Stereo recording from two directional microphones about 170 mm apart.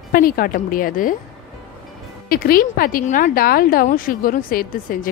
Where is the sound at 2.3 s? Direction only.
60° left (ahead or behind).